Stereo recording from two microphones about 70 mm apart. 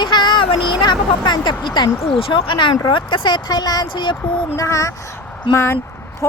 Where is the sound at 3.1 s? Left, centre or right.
Left.